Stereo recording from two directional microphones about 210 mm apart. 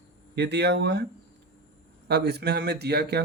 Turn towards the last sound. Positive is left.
turn(degrees=-50)  # may be behind; listen again after turning